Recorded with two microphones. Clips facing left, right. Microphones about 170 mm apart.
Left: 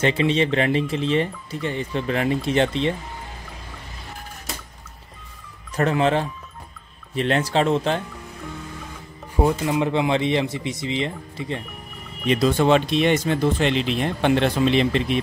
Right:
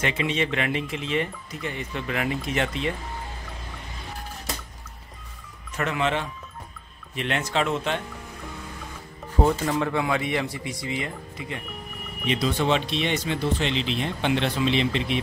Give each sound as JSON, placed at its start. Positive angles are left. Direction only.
{"t": 0.0, "sound": "speech", "side_deg": 30}
{"t": 5.8, "sound": "speech", "side_deg": 35}
{"t": 9.7, "sound": "speech", "side_deg": 20}
{"t": 12.3, "sound": "speech", "side_deg": 45}